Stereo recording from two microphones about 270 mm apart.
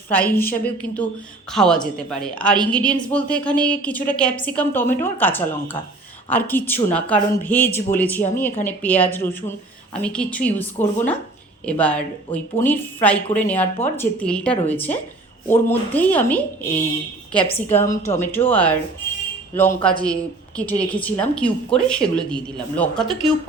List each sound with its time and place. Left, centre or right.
0.1 s a woman's voice: centre